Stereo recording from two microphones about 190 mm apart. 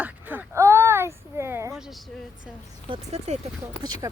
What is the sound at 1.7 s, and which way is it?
Speech, 5° right (ahead or behind).